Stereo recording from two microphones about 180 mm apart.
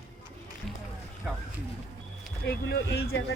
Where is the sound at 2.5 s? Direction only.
65° left (ahead or behind).